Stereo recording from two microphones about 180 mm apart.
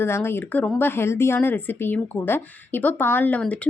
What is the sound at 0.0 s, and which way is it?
A woman's voice, 15° left (ahead or behind).